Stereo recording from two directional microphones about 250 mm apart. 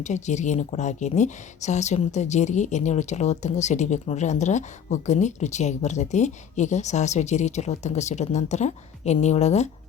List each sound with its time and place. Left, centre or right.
0.0 s speech: left